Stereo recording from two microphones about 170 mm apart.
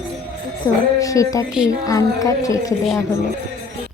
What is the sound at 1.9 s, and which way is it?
Speech, 20° left (ahead or behind).